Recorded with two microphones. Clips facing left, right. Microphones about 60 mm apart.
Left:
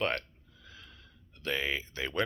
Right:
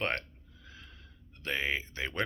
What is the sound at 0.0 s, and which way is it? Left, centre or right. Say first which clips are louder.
Speech: left 1 dB; right.